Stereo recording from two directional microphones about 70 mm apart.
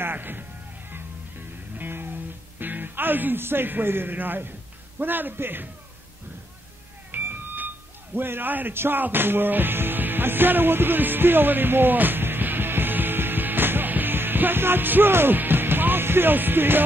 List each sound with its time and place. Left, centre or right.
0.0 s music: right
2.6 s a man's voice: right
7.1 s a sound: right